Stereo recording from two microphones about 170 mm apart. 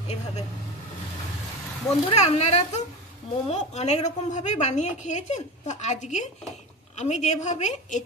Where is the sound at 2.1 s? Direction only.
40° left (ahead or behind).